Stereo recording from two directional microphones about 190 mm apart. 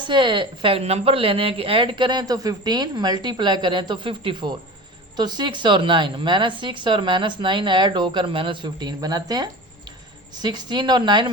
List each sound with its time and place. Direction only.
0.1 s speech: 25° right (ahead or behind)